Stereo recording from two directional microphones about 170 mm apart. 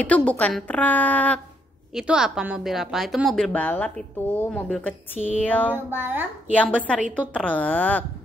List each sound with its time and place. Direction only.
0.0 s a woman's voice: 5° left (ahead or behind)
2.0 s a woman's voice: 5° right (ahead or behind)
5.7 s speech: 10° right (ahead or behind)
6.5 s a woman's voice: 5° left (ahead or behind)